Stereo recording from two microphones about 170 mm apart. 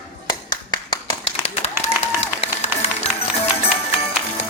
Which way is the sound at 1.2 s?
40° left (ahead or behind).